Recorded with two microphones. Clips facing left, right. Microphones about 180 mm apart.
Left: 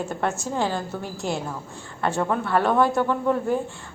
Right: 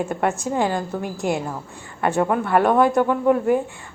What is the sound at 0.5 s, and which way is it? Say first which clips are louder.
A woman's voice: right 4 dB; 15° right (ahead or behind).